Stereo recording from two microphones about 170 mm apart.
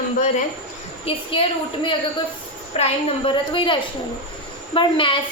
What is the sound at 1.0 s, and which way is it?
A woman's voice, 30° left (ahead or behind).